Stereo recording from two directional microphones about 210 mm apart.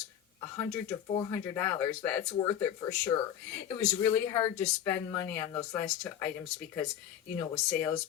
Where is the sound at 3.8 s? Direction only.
10° left (ahead or behind).